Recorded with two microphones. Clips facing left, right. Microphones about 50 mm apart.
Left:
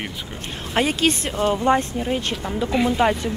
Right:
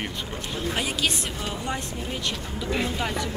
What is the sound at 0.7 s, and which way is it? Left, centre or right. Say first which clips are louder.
Speech: left 8 dB; left.